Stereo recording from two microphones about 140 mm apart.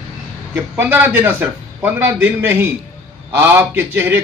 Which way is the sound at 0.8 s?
15° right (ahead or behind).